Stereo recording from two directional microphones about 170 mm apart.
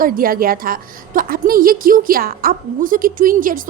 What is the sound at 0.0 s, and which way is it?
A woman's voice, 55° right (ahead or behind).